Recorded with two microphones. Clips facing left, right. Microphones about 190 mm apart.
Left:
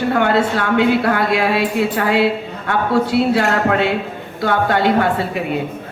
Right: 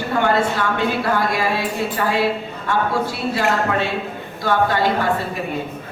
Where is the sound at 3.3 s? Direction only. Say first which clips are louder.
Left 4 dB; 70° left (ahead or behind).